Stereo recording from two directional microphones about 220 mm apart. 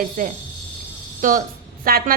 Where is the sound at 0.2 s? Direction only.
40° right (ahead or behind).